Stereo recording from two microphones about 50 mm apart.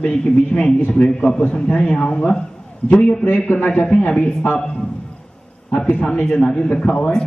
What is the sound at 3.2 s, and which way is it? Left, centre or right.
Speech, left.